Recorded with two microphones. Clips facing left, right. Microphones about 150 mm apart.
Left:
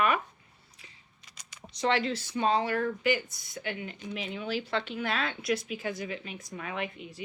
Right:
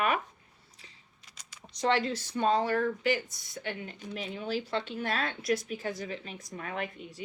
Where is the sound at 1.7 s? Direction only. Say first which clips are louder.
Even; 45° right (ahead or behind).